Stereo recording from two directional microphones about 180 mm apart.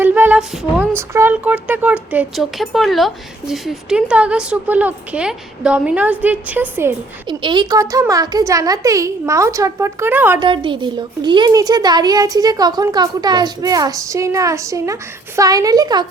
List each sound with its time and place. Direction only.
0.0 s speech: 10° right (ahead or behind)
7.3 s speech: 25° right (ahead or behind)
10.4 s speech: 25° right (ahead or behind)